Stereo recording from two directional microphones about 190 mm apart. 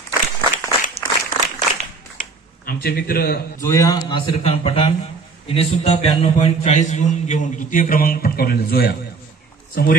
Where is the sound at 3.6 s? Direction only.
15° left (ahead or behind).